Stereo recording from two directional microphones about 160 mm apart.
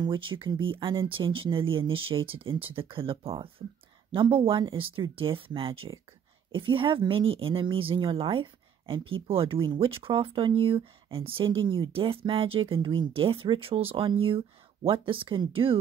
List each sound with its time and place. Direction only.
0.0 s a woman's voice: 30° right (ahead or behind)